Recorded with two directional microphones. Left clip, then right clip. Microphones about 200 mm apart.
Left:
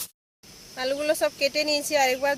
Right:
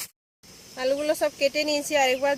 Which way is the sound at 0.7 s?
20° right (ahead or behind).